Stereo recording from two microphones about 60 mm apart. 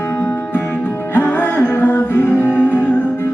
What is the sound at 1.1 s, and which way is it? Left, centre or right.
Music, left.